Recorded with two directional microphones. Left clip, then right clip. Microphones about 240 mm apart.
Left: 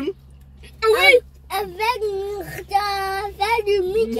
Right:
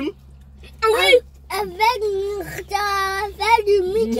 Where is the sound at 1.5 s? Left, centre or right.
Centre.